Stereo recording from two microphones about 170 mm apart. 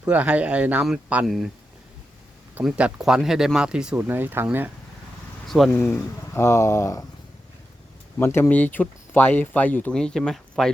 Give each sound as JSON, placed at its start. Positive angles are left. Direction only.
{"t": 0.0, "sound": "speech", "side_deg": -10}
{"t": 2.6, "sound": "speech", "side_deg": -5}
{"t": 5.5, "sound": "speech", "side_deg": 0}
{"t": 5.8, "sound": "speech", "side_deg": 15}
{"t": 8.2, "sound": "speech", "side_deg": 15}